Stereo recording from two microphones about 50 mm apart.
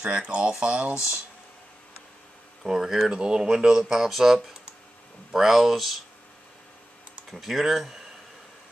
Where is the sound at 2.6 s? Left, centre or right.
Centre.